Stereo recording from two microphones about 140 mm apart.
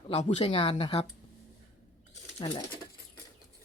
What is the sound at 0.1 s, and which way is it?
Speech, 50° left (ahead or behind).